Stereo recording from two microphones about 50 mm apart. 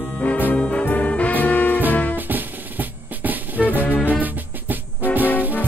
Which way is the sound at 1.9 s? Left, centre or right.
Left.